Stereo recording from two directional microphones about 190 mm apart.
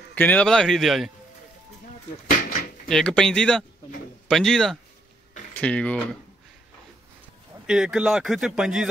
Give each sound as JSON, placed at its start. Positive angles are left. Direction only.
{"t": 0.1, "sound": "a man's voice", "side_deg": 10}
{"t": 2.3, "sound": "a sound", "side_deg": 45}
{"t": 2.9, "sound": "a man's voice", "side_deg": 5}
{"t": 7.6, "sound": "a man's voice", "side_deg": -5}